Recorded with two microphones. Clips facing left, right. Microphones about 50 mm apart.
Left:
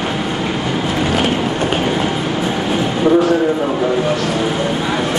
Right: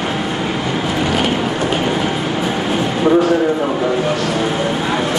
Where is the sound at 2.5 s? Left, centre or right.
Centre.